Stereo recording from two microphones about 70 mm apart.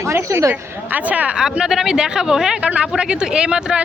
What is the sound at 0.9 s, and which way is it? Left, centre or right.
Speech, right.